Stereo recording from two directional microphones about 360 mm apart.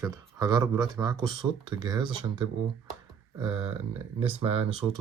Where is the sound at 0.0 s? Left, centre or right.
Centre.